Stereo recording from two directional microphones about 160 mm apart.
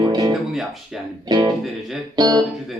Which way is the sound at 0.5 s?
Centre (ahead or behind).